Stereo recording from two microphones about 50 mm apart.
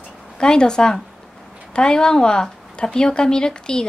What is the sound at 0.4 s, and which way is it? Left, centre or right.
A woman's voice, centre.